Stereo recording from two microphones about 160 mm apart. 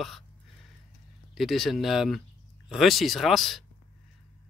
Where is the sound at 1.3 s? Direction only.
Centre (ahead or behind).